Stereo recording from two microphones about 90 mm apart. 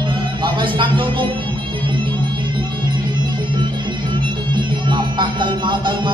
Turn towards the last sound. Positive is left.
turn(degrees=-60)  # may be behind; listen again after turning